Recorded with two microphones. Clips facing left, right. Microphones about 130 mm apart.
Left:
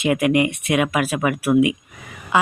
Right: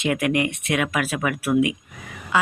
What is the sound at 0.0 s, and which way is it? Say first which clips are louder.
A woman's voice: left 4 dB; 15° left (ahead or behind).